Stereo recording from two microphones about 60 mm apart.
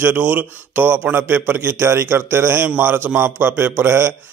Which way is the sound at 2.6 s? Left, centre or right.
Right.